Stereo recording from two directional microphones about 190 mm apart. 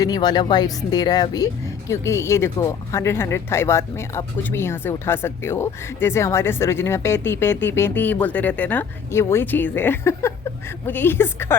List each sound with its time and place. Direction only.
0.0 s speech: 20° left (ahead or behind)